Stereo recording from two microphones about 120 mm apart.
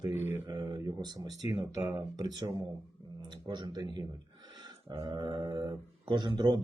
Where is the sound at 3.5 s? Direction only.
35° right (ahead or behind).